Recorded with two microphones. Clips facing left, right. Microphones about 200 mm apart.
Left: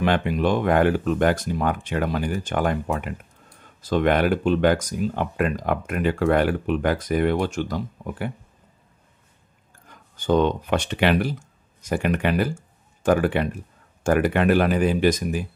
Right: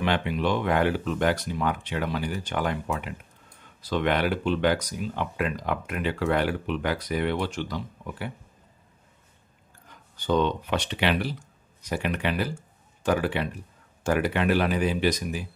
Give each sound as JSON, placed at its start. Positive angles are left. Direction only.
{"t": 0.0, "sound": "speech", "side_deg": 50}
{"t": 10.1, "sound": "speech", "side_deg": 50}